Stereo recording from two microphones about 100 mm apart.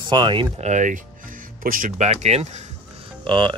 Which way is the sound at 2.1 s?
90° right.